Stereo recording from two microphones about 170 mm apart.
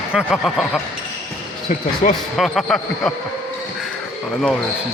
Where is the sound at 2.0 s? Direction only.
45° left (ahead or behind).